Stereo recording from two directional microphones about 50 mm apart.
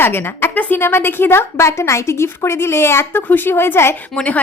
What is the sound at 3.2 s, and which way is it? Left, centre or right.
Speech, left.